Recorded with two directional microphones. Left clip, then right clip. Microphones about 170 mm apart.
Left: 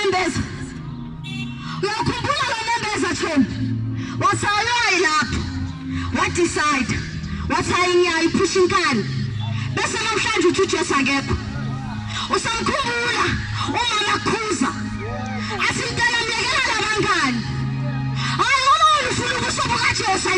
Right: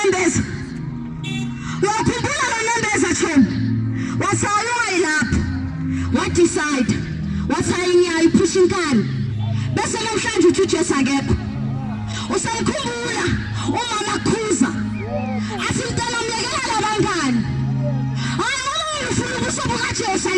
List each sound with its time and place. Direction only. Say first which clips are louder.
0.0 s music: right 2 dB; 40° right (ahead or behind)
1.8 s music: right 4 dB; 40° right (ahead or behind)
4.2 s a man's voice: left 1 dB; 45° right (ahead or behind)
12.3 s music: left 1 dB; 40° right (ahead or behind)
15.4 s a sound: left 2 dB; 40° right (ahead or behind)